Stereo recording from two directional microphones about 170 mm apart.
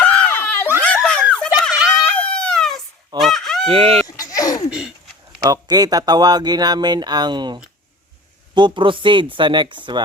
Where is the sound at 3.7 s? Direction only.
35° right (ahead or behind).